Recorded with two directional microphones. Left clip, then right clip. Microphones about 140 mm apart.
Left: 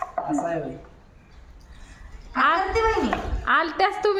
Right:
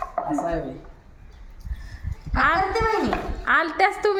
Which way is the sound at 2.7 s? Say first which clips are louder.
Left 1 dB; 25° right (ahead or behind).